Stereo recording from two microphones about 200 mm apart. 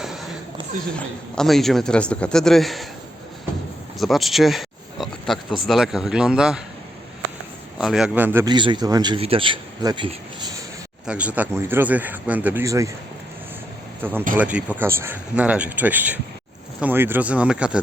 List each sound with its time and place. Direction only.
0.9 s speech: centre (ahead or behind)
3.9 s speech: centre (ahead or behind)
7.8 s speech: 5° right (ahead or behind)
8.4 s speech: 25° right (ahead or behind)
11.0 s speech: 5° right (ahead or behind)
14.0 s speech: 10° right (ahead or behind)